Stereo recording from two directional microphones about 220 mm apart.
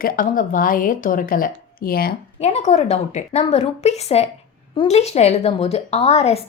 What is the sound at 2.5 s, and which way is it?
A woman's voice, 30° left (ahead or behind).